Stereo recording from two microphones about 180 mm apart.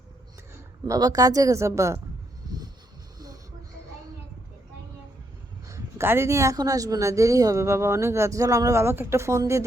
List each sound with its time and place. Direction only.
0.9 s speech: 20° right (ahead or behind)
5.6 s speech: 15° right (ahead or behind)